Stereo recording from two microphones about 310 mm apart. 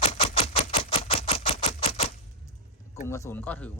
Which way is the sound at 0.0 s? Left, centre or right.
Centre.